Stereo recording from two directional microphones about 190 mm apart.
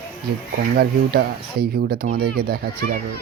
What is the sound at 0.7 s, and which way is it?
Speech, 55° right (ahead or behind).